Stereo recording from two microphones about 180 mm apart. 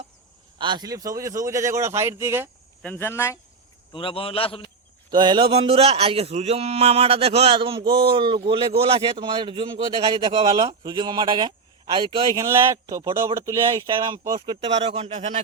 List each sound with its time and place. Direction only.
0.6 s a man's voice: 25° right (ahead or behind)
2.8 s speech: 10° left (ahead or behind)
3.9 s a man's voice: 30° left (ahead or behind)
5.1 s speech: 25° right (ahead or behind)